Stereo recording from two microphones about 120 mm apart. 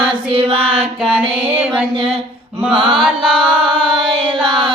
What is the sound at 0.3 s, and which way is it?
Child singing, 50° right (ahead or behind).